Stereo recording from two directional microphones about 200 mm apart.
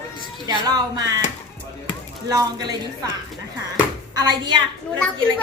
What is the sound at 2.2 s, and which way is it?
Speech, 20° right (ahead or behind).